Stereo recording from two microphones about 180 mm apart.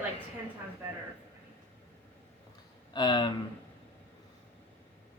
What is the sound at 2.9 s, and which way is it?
Speech, 25° left (ahead or behind).